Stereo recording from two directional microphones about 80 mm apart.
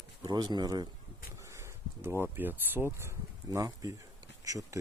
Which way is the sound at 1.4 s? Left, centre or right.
Right.